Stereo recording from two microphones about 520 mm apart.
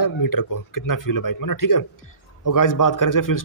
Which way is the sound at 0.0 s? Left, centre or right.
Left.